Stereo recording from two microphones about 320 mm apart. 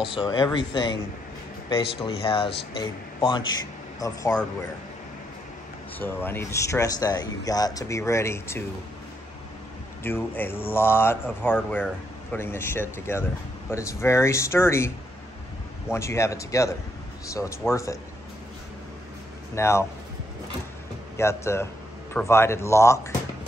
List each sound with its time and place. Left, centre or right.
0.1 s speech: centre
5.9 s speech: centre
10.0 s speech: centre
15.9 s speech: centre
19.5 s speech: centre
21.2 s speech: centre